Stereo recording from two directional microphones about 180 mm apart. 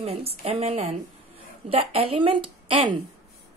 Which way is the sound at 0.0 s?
35° right (ahead or behind).